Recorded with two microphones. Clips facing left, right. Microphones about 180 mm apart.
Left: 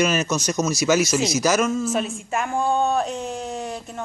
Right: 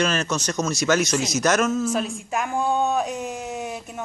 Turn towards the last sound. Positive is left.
turn(degrees=-5)  # may be behind; listen again after turning